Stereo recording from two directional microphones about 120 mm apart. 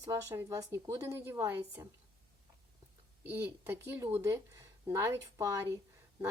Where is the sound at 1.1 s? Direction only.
20° right (ahead or behind).